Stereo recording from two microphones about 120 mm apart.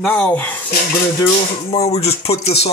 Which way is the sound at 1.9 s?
55° left (ahead or behind).